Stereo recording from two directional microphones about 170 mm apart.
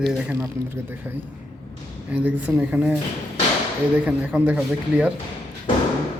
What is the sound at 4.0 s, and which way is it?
Speech, 10° right (ahead or behind).